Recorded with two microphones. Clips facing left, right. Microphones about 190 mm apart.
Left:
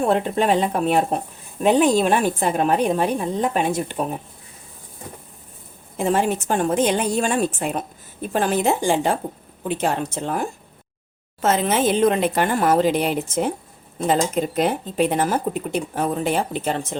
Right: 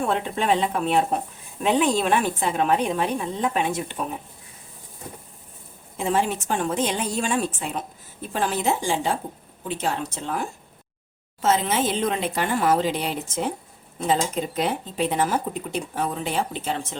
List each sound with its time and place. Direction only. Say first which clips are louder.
0.0 s a woman's voice: left 5 dB; 40° left (ahead or behind)
6.0 s a woman's voice: left 3 dB; 50° left (ahead or behind)
11.4 s a woman's voice: left 3 dB; 55° left (ahead or behind)